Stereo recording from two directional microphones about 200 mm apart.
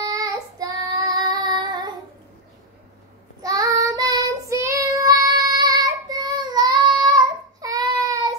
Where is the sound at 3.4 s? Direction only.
15° right (ahead or behind).